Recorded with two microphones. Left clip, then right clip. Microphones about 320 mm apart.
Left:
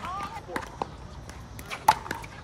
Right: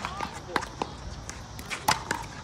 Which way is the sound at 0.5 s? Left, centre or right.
Centre.